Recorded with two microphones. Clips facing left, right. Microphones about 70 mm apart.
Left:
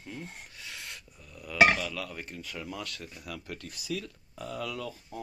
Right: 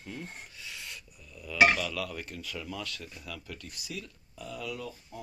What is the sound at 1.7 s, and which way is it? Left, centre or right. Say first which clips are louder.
Speech: right 1 dB; centre.